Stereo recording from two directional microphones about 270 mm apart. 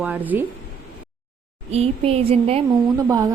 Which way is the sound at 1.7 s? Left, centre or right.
Right.